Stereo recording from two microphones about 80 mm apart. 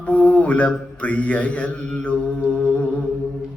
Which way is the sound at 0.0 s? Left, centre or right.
Centre.